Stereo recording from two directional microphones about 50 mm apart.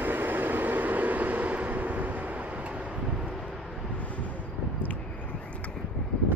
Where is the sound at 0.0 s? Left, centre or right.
Right.